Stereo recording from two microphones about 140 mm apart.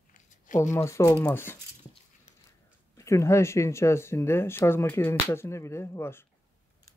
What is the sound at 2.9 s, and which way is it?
Speech, 20° left (ahead or behind).